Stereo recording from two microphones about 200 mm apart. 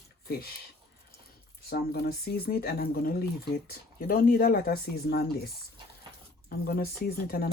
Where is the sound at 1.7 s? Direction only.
50° left (ahead or behind).